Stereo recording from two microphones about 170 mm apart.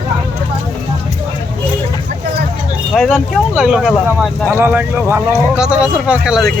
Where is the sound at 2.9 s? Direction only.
Centre (ahead or behind).